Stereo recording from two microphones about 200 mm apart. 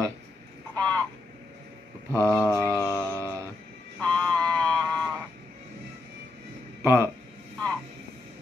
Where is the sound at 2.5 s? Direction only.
15° right (ahead or behind).